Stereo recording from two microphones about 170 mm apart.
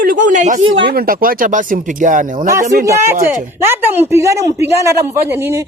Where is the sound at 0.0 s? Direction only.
50° right (ahead or behind).